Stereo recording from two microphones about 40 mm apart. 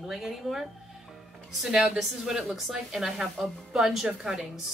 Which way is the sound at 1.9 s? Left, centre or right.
Centre.